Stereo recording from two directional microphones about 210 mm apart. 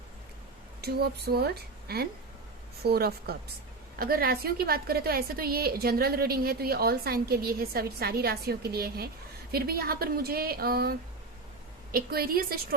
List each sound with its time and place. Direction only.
0.8 s a woman's voice: 50° right (ahead or behind)